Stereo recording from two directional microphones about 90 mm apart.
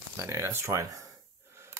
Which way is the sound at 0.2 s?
30° right (ahead or behind).